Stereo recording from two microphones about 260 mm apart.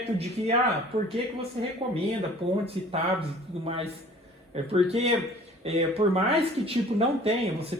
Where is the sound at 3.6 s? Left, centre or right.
Right.